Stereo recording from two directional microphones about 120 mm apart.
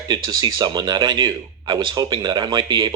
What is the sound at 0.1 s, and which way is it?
Speech, 35° right (ahead or behind).